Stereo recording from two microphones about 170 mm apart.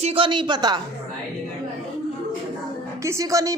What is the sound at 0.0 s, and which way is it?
Speech, 35° right (ahead or behind).